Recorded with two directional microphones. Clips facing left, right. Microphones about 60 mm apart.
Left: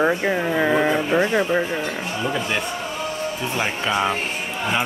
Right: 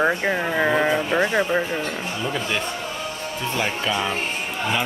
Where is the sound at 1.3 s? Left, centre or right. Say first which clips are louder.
Left 1 dB; centre.